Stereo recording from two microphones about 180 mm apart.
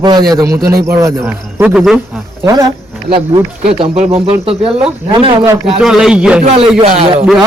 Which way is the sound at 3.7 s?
30° right (ahead or behind).